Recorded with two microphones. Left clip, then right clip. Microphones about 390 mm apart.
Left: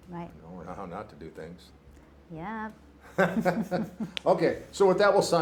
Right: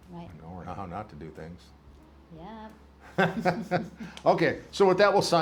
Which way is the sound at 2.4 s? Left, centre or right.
Left.